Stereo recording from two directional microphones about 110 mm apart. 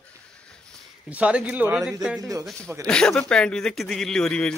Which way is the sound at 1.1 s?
10° right (ahead or behind).